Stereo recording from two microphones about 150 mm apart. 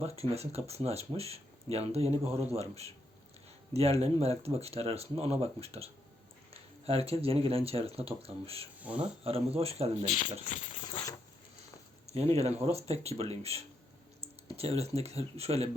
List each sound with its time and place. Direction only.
0.2 s speech: 45° right (ahead or behind)
10.8 s a sound: 30° left (ahead or behind)
12.0 s speech: 45° right (ahead or behind)